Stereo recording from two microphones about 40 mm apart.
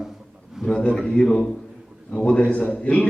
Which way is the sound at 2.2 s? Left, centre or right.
Left.